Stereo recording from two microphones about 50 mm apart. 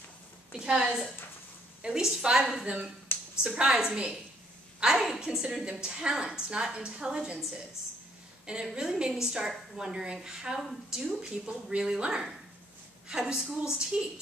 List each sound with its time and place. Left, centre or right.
0.5 s a woman's voice: centre
2.6 s speech: right
3.1 s a sound: left
3.5 s a woman's voice: centre
4.8 s a woman's voice: centre
8.5 s a woman's voice: centre